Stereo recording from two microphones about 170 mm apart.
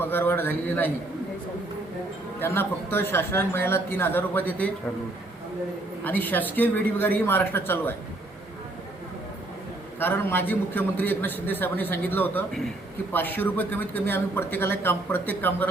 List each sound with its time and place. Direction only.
0.0 s speech: 15° left (ahead or behind)
2.4 s speech: 15° left (ahead or behind)
6.1 s speech: 10° left (ahead or behind)
10.0 s speech: 10° left (ahead or behind)